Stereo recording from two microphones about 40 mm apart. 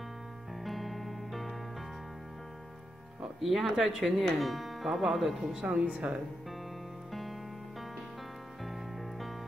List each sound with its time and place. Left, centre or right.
0.7 s music: centre
3.3 s speech: centre
4.2 s speech: centre
5.5 s speech: right
7.1 s music: centre
8.6 s music: centre